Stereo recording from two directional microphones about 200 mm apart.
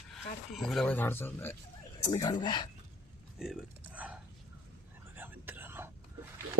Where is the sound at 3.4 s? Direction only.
5° right (ahead or behind).